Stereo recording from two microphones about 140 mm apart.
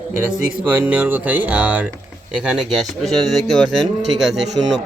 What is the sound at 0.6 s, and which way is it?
Speech, 10° right (ahead or behind).